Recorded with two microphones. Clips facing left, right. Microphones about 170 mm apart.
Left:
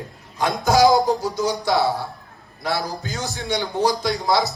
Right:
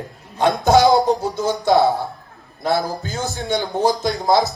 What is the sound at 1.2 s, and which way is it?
Speech, 55° right (ahead or behind).